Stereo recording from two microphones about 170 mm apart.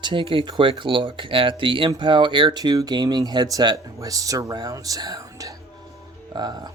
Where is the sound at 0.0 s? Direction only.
30° right (ahead or behind).